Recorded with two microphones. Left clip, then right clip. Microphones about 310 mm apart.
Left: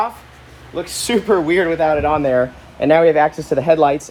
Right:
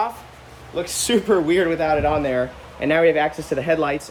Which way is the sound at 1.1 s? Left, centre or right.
Centre.